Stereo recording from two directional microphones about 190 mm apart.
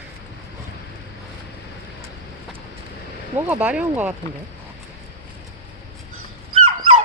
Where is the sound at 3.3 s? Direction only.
10° right (ahead or behind).